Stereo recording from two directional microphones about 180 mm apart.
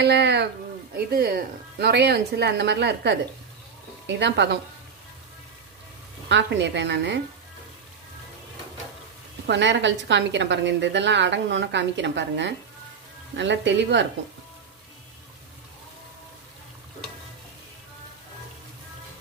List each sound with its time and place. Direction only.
0.0 s a woman's voice: 70° right (ahead or behind)
0.9 s a woman's voice: 55° right (ahead or behind); by 4.4 s 75° right (ahead or behind)
6.2 s a woman's voice: 80° right
9.5 s a woman's voice: 85° right